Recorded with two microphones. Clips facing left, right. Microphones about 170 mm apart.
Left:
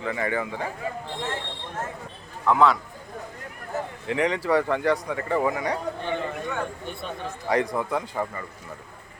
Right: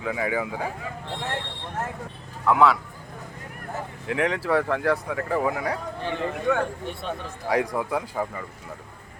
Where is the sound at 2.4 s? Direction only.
5° right (ahead or behind).